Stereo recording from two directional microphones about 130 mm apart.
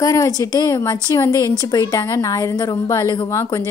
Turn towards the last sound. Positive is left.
turn(degrees=25)  # may be behind; listen again after turning